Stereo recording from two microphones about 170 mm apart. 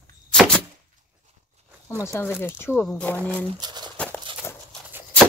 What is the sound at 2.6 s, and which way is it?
Speech, 15° left (ahead or behind).